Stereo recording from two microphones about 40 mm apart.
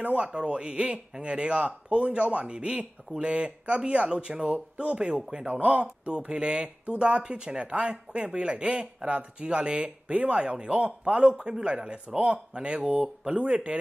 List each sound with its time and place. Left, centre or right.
0.0 s speech: right
0.3 s speech: right
5.5 s speech: right
11.3 s speech: right